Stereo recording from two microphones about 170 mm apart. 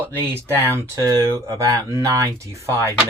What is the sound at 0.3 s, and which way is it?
Speech, 15° right (ahead or behind).